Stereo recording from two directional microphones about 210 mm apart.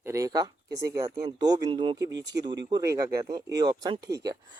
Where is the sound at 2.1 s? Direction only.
55° right (ahead or behind).